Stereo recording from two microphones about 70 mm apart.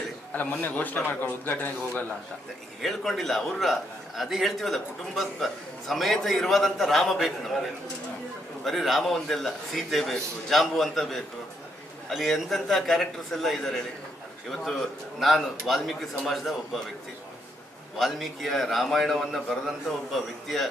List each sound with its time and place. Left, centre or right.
0.3 s a man's voice: left
2.8 s a man's voice: centre
8.6 s a man's voice: centre
17.9 s a man's voice: centre